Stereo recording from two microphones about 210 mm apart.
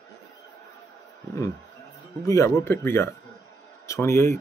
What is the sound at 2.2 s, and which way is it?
Speech, 15° left (ahead or behind).